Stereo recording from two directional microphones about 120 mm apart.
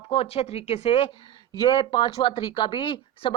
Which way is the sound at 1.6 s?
35° left (ahead or behind).